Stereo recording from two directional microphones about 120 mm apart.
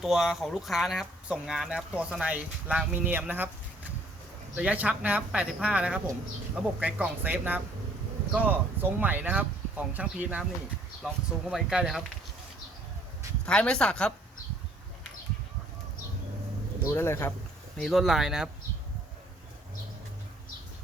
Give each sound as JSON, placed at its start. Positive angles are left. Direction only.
{"t": 0.0, "sound": "speech", "side_deg": -5}
{"t": 4.5, "sound": "speech", "side_deg": -10}
{"t": 11.5, "sound": "speech", "side_deg": -5}
{"t": 13.4, "sound": "speech", "side_deg": 10}
{"t": 16.8, "sound": "speech", "side_deg": 20}
{"t": 17.7, "sound": "speech", "side_deg": 0}